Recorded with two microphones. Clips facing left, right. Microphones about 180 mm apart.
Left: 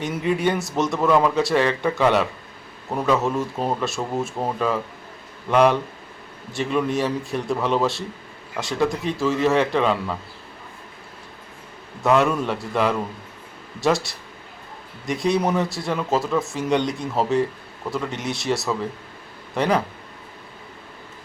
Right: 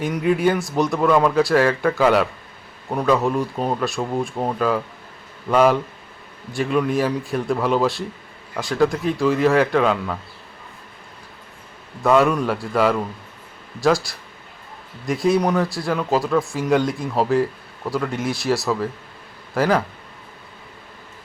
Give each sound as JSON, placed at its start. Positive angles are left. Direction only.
{"t": 0.0, "sound": "speech", "side_deg": 0}
{"t": 12.0, "sound": "speech", "side_deg": 0}